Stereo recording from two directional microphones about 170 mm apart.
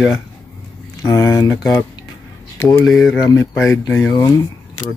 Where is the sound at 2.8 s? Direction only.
Centre (ahead or behind).